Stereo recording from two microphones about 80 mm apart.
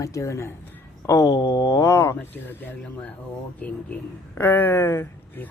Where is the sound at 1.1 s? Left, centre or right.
Left.